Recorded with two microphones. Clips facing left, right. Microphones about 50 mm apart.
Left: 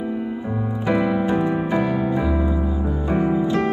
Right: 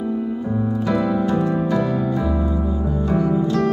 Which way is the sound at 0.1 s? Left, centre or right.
Left.